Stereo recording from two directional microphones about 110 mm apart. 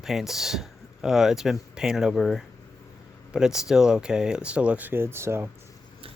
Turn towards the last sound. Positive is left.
turn(degrees=-25)  # may be behind; listen again after turning